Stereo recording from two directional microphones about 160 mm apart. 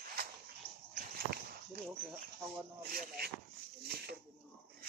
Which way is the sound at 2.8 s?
70° right (ahead or behind).